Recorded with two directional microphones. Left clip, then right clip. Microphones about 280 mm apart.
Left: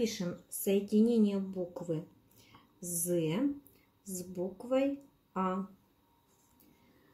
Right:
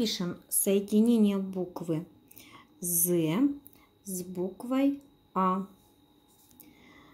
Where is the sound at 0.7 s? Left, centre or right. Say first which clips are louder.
Right 3 dB; right.